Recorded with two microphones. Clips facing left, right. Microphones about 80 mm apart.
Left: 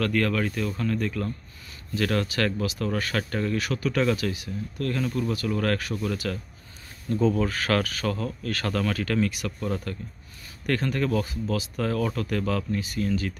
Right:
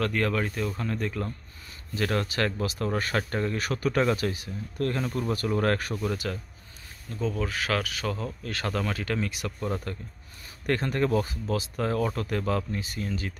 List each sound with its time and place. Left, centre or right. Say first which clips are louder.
0.0 s speech: left 2 dB; centre
2.2 s speech: left 2 dB; right
3.5 s speech: even; right
7.2 s speech: left 4 dB; centre
10.7 s speech: even; right